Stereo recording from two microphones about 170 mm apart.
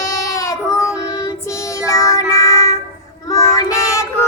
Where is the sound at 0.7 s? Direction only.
5° right (ahead or behind).